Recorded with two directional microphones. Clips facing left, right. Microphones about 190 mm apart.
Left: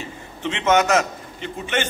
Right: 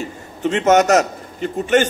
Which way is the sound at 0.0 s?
45° right (ahead or behind).